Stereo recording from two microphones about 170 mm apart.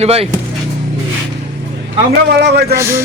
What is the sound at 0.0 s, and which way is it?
Speech, 35° right (ahead or behind).